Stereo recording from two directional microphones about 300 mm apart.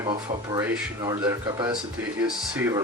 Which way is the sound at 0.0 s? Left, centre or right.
Centre.